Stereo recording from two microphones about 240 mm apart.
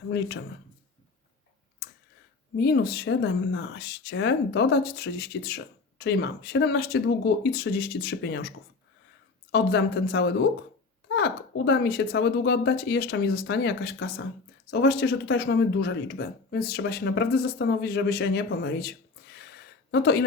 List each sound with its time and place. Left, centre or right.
2.6 s speech: left